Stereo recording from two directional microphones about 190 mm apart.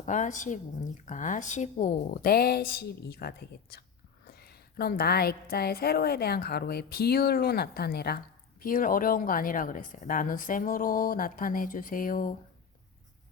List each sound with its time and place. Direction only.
0.0 s a woman's voice: 40° left (ahead or behind)